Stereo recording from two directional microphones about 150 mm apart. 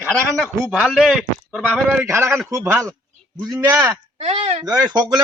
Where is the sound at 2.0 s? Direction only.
15° right (ahead or behind).